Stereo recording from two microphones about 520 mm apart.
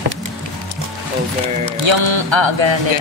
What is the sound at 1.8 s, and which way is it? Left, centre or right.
Speech, right.